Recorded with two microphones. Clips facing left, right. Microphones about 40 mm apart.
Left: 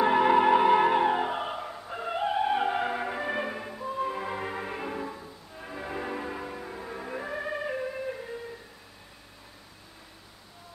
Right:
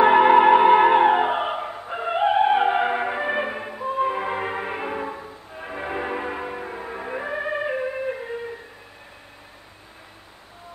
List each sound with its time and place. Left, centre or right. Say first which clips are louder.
0.0 s music: right 8 dB; right